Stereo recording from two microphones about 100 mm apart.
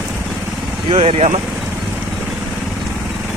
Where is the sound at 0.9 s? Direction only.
80° right.